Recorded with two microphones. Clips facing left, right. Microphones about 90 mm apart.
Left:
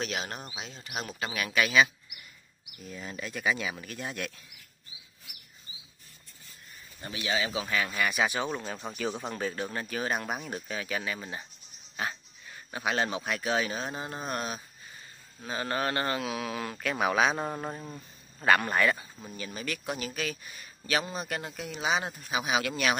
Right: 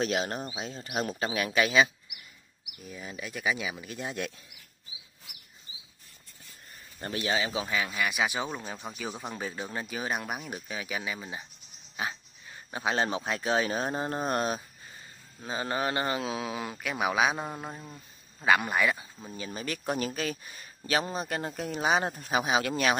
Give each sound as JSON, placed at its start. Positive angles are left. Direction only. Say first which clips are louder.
{"t": 0.0, "sound": "speech", "louder": "right 5 dB", "side_deg": -35}
{"t": 2.8, "sound": "speech", "louder": "left 1 dB", "side_deg": -10}
{"t": 7.0, "sound": "speech", "louder": "right 5 dB", "side_deg": -50}
{"t": 7.2, "sound": "speech", "louder": "even", "side_deg": -30}
{"t": 7.7, "sound": "speech", "louder": "left 3 dB", "side_deg": -10}
{"t": 12.0, "sound": "a sound", "louder": "even", "side_deg": -15}
{"t": 12.7, "sound": "speech", "louder": "right 1 dB", "side_deg": -25}
{"t": 15.4, "sound": "speech", "louder": "even", "side_deg": -20}
{"t": 16.8, "sound": "speech", "louder": "left 1 dB", "side_deg": -5}
{"t": 18.4, "sound": "speech", "louder": "left 1 dB", "side_deg": -5}
{"t": 19.3, "sound": "speech", "louder": "right 1 dB", "side_deg": -30}